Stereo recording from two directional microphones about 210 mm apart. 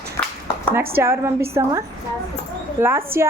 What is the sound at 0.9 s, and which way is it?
A woman's voice, 10° right (ahead or behind).